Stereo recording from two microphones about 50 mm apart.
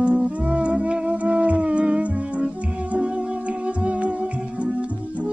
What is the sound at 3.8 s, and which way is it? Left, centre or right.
Music, right.